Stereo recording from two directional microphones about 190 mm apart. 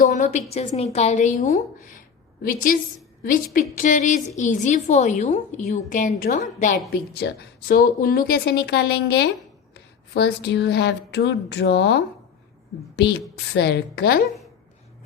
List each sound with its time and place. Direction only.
0.0 s a woman's voice: 40° left (ahead or behind)
6.9 s speech: 55° left (ahead or behind)